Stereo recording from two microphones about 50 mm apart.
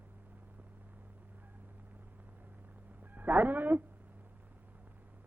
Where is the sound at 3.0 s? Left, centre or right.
Right.